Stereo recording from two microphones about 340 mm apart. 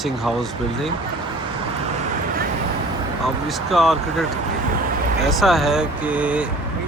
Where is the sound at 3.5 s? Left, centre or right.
Centre.